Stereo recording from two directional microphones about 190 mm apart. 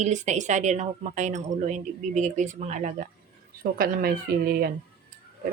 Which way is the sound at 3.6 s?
50° right (ahead or behind).